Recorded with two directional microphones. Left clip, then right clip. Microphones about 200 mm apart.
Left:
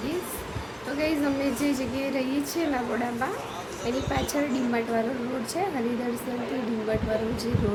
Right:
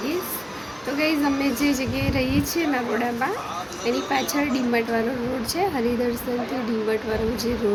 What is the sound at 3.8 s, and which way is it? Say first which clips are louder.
Music: right 5 dB; 5° left (ahead or behind).